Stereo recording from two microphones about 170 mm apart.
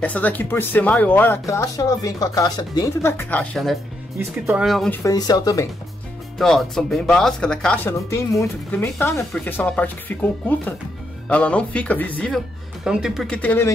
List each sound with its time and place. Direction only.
0.0 s speech: 10° left (ahead or behind)
4.9 s speech: 20° left (ahead or behind)
6.3 s speech: centre (ahead or behind)
12.8 s speech: 5° right (ahead or behind); by 13.7 s 10° left (ahead or behind)